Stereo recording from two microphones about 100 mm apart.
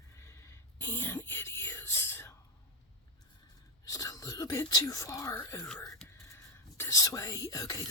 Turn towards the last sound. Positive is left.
turn(degrees=40)  # may be behind; listen again after turning